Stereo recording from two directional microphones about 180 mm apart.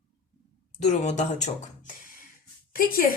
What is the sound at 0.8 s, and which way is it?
Speech, 40° left (ahead or behind).